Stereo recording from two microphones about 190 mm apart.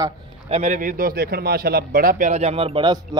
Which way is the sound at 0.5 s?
40° right (ahead or behind).